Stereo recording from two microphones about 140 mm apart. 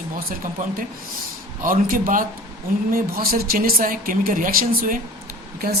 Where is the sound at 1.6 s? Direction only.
85° right.